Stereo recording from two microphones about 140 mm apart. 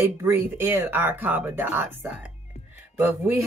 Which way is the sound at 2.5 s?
50° left (ahead or behind).